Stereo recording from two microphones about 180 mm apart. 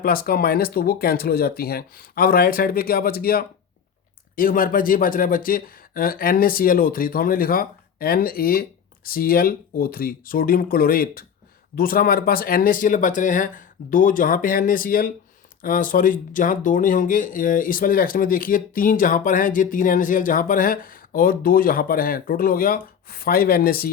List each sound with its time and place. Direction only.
0.0 s speech: 55° left (ahead or behind)